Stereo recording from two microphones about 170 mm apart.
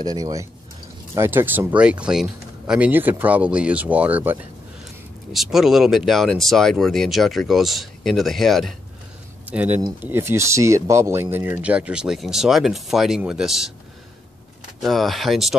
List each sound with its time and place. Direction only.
0.0 s speech: 20° right (ahead or behind); by 8.7 s centre (ahead or behind)
9.5 s speech: 10° right (ahead or behind)
14.8 s speech: centre (ahead or behind)